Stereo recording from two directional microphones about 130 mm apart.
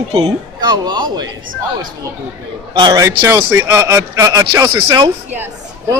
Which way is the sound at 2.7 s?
30° right (ahead or behind).